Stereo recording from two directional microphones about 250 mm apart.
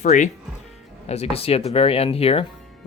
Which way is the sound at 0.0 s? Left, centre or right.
Left.